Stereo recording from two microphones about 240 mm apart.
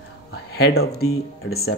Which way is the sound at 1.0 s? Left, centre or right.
Left.